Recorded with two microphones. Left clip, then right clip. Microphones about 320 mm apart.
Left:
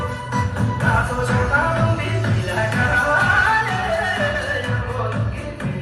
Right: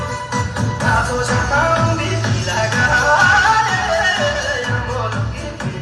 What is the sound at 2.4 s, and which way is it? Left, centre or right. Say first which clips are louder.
Music: right 4 dB; centre.